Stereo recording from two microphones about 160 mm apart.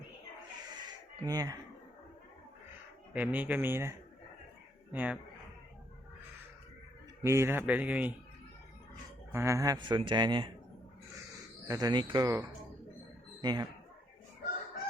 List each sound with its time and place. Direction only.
1.2 s speech: 25° right (ahead or behind)
3.1 s speech: 10° right (ahead or behind)
7.2 s speech: 15° right (ahead or behind)
9.3 s speech: 15° right (ahead or behind)
11.7 s speech: 25° right (ahead or behind)
13.4 s speech: 25° right (ahead or behind)